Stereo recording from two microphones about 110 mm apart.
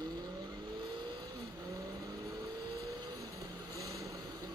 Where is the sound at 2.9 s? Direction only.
30° right (ahead or behind).